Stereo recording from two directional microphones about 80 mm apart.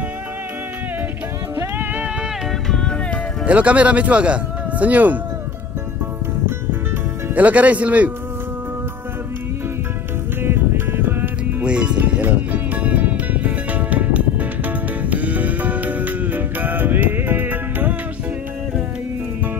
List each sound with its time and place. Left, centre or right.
2.7 s music: centre
3.4 s speech: centre
7.3 s speech: centre
10.4 s music: right
11.6 s music: centre